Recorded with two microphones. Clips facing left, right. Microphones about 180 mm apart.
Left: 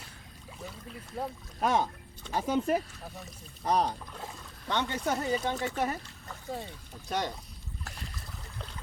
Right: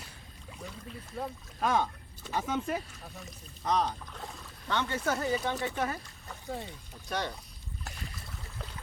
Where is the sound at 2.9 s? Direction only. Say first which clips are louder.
Left 2 dB; centre (ahead or behind).